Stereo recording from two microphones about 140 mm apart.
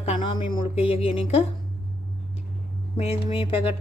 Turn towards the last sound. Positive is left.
turn(degrees=40)  # may be behind; listen again after turning